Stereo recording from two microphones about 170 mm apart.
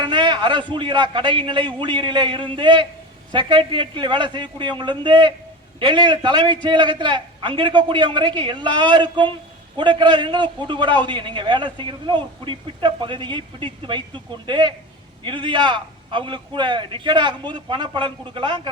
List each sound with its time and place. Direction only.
0.0 s a man's voice: 25° right (ahead or behind)